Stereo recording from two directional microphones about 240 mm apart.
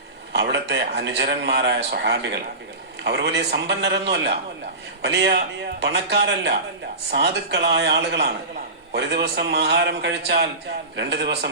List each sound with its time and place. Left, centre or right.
0.3 s a man's voice: right